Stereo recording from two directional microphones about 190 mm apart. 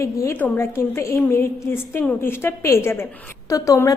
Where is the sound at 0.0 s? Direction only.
15° left (ahead or behind).